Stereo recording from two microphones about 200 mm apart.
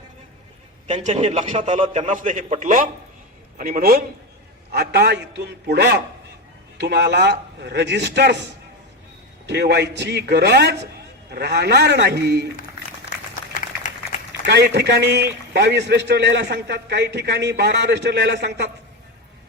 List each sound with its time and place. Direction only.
0.9 s a man's voice: 35° right (ahead or behind); by 8.4 s 60° right (ahead or behind)
9.5 s a man's voice: 60° right (ahead or behind)
13.5 s a sound: 40° left (ahead or behind)
14.4 s a man's voice: 55° right (ahead or behind)